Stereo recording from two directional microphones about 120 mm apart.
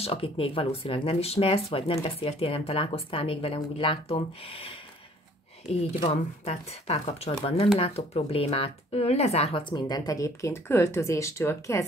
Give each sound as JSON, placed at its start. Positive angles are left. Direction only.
{"t": 0.0, "sound": "speech", "side_deg": 50}
{"t": 5.9, "sound": "speech", "side_deg": 45}
{"t": 6.5, "sound": "speech", "side_deg": 65}
{"t": 9.6, "sound": "speech", "side_deg": 40}